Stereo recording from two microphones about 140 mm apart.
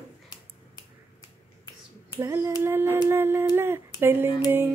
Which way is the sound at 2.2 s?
15° right (ahead or behind).